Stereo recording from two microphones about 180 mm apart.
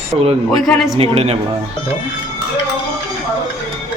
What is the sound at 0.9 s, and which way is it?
Speech, 35° right (ahead or behind).